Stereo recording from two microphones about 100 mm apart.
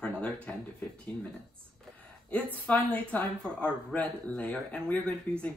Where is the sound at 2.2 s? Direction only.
15° left (ahead or behind).